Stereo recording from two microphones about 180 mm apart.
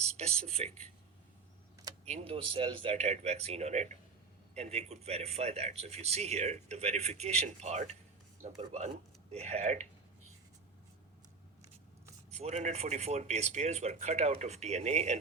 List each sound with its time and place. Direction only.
0.2 s speech: 35° right (ahead or behind)
2.0 s speech: 35° right (ahead or behind)
9.3 s speech: 35° right (ahead or behind)
12.3 s speech: 40° right (ahead or behind)